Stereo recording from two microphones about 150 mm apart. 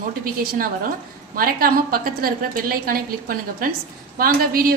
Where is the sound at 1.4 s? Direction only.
80° right.